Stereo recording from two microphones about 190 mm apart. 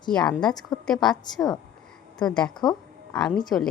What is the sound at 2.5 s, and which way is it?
Speech, 20° left (ahead or behind).